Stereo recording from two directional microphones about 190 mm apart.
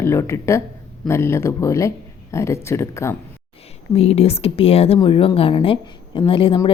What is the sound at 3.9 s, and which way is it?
A woman's voice, 30° left (ahead or behind).